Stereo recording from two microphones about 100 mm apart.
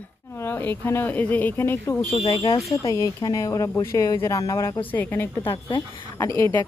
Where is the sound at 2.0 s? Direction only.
60° left (ahead or behind).